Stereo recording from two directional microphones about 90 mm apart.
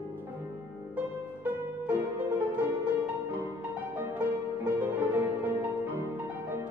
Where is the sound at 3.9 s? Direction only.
15° right (ahead or behind).